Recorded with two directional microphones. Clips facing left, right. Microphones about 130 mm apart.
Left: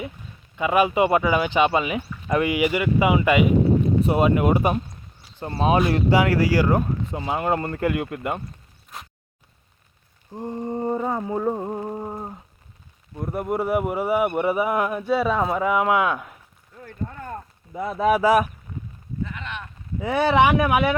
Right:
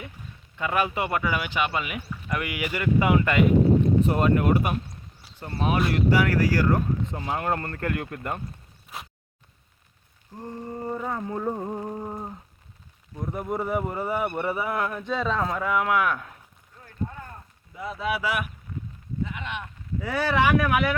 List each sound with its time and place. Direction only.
0.5 s speech: 15° left (ahead or behind)
5.9 s speech: 20° left (ahead or behind)
8.9 s a sound: 5° right (ahead or behind)
10.3 s speech: 20° left (ahead or behind)
11.2 s speech: 15° left (ahead or behind)
13.1 s speech: 5° left (ahead or behind)
17.7 s speech: 50° left (ahead or behind)
19.2 s a sound: 15° right (ahead or behind)
20.0 s speech: 20° left (ahead or behind)